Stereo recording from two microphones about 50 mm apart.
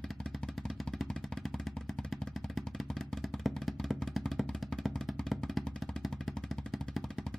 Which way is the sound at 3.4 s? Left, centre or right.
Centre.